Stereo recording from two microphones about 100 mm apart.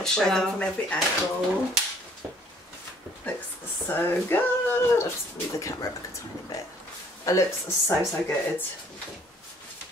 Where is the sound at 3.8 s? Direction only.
20° left (ahead or behind).